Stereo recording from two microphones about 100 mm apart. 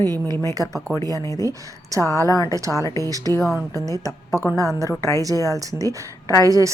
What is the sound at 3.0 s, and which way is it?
Speech, 35° right (ahead or behind).